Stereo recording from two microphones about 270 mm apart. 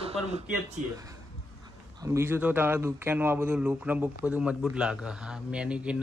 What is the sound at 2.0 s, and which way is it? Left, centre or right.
Speech, centre.